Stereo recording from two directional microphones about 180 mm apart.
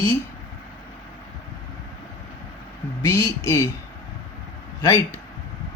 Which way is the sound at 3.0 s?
15° left (ahead or behind).